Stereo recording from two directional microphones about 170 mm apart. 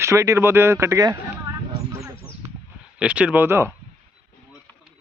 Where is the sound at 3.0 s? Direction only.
5° right (ahead or behind).